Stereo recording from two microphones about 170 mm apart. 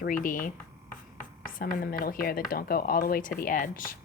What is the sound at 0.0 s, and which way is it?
A woman's voice, 55° left (ahead or behind).